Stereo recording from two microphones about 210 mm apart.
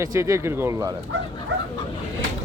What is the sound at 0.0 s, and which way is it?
Speech, 15° right (ahead or behind).